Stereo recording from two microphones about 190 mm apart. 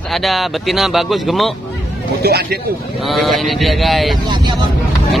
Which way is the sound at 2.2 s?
55° right (ahead or behind).